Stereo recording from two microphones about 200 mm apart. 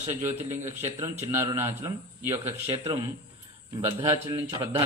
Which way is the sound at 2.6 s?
25° right (ahead or behind).